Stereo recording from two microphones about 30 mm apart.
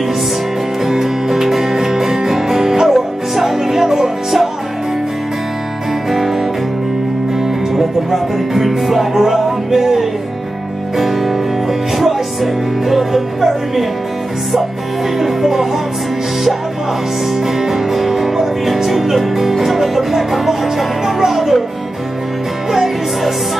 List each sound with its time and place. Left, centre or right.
0.8 s music: centre
7.7 s music: centre
12.8 s music: centre
15.1 s music: centre
17.6 s speech: centre
21.0 s music: centre
22.7 s music: centre